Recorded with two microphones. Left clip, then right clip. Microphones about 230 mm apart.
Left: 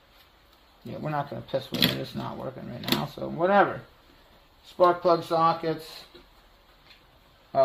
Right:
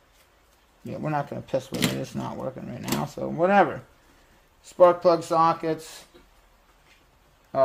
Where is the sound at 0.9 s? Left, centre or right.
Right.